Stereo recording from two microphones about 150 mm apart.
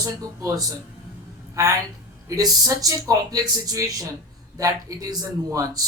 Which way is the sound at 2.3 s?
25° right (ahead or behind).